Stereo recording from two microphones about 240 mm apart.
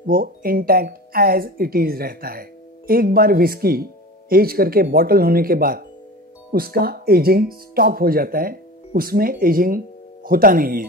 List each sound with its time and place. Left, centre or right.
0.0 s speech: right